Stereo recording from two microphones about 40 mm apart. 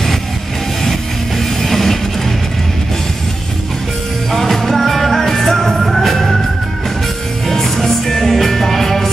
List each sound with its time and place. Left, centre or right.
1.6 s music: centre
4.3 s music: centre
7.4 s music: centre